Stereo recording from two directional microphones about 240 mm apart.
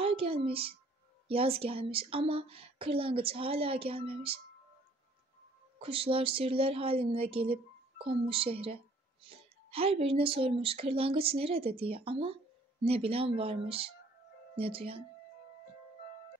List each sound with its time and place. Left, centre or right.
0.0 s a woman's voice: right
5.8 s speech: right